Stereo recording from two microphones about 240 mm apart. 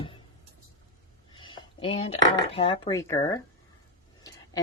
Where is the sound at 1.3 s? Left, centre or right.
Centre.